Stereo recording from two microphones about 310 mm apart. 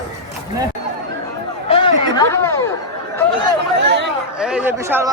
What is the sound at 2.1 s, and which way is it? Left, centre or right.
Speech, centre.